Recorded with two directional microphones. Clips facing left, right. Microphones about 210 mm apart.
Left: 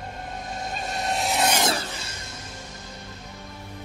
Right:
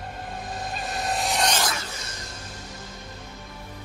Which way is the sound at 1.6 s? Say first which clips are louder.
Left 4 dB; 30° left (ahead or behind).